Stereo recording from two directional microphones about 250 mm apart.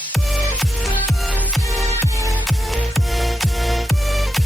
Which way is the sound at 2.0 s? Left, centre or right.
Centre.